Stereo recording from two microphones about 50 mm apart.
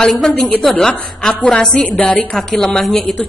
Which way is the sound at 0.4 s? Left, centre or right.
Centre.